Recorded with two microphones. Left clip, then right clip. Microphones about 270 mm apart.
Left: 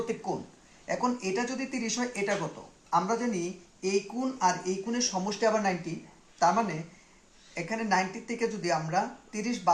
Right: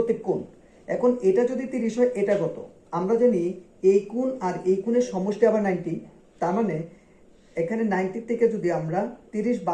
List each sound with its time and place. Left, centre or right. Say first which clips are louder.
0.9 s speech: right 9 dB; centre